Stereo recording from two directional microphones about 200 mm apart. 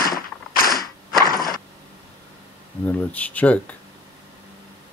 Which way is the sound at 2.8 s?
10° left (ahead or behind).